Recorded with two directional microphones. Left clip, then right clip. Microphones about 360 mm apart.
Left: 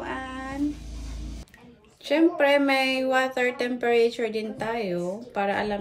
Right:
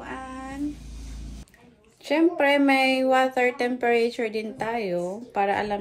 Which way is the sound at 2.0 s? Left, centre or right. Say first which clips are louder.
Even; centre.